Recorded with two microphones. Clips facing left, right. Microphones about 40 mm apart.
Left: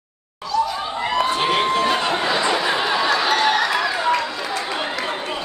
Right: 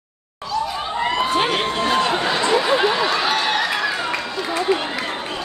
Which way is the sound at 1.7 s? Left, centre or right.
Centre.